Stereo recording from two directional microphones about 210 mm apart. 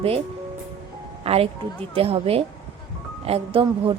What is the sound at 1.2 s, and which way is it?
A woman's voice, 30° right (ahead or behind).